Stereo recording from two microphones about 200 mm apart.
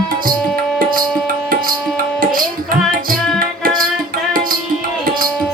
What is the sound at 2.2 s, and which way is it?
Tabla, 45° right (ahead or behind).